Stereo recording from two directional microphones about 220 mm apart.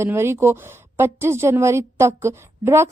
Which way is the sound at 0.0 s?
10° right (ahead or behind).